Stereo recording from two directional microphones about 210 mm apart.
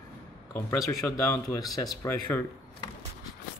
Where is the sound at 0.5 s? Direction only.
15° left (ahead or behind).